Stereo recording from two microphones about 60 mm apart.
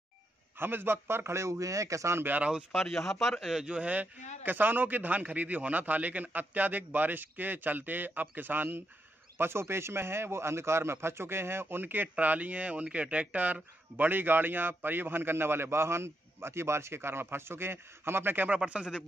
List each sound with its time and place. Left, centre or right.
0.6 s a man's voice: right
2.1 s a man's voice: right
2.7 s a man's voice: centre
3.7 s a man's voice: right
18.6 s speech: centre